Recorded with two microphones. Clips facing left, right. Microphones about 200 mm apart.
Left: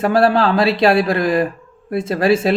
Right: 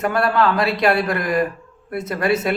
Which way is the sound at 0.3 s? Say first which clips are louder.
Left 3 dB; 30° left (ahead or behind).